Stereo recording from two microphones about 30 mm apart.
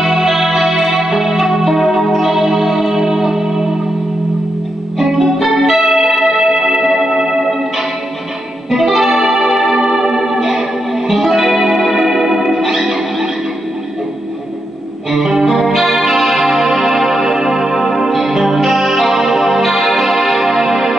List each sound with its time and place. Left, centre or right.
0.0 s music: centre
4.9 s music: centre
8.6 s music: centre
15.0 s music: centre